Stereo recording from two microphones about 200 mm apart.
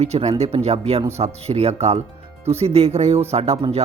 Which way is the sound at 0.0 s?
30° right (ahead or behind).